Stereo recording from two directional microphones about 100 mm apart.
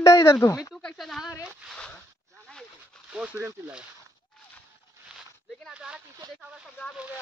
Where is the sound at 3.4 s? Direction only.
25° right (ahead or behind).